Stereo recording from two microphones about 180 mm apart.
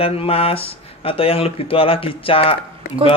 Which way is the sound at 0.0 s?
30° left (ahead or behind).